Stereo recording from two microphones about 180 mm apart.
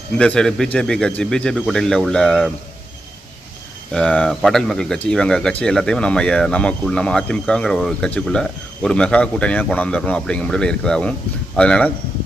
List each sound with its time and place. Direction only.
0.2 s speech: 5° left (ahead or behind)
3.9 s speech: 5° left (ahead or behind)